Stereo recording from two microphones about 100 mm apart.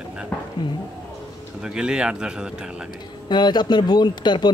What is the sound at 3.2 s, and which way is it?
Speech, 45° left (ahead or behind).